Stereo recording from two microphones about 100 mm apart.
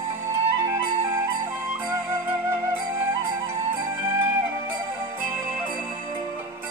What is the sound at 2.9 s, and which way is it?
Music, 25° right (ahead or behind).